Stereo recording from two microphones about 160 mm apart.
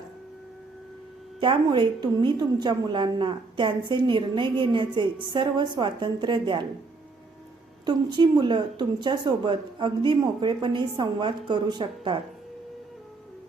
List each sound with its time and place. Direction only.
1.4 s speech: 30° right (ahead or behind)
7.9 s speech: 30° right (ahead or behind)